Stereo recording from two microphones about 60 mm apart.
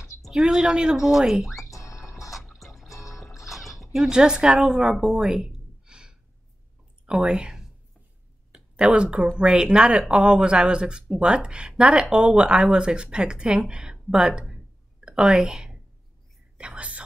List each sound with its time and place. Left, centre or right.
0.3 s speech: centre
1.7 s music: left
2.3 s music: centre
2.9 s music: left
3.3 s speech: centre
5.1 s a sound: centre
7.1 s a woman's voice: centre
16.5 s whispering: centre